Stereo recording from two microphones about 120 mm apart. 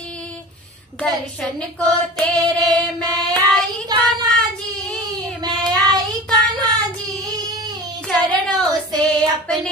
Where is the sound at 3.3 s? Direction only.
5° left (ahead or behind).